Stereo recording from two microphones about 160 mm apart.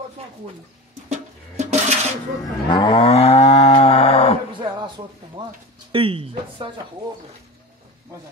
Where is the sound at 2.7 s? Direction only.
30° left (ahead or behind).